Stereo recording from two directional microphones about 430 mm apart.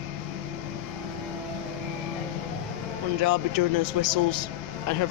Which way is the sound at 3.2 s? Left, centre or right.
Right.